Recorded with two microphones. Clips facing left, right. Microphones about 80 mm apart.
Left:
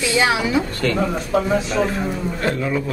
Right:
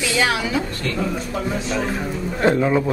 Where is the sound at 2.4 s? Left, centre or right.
Right.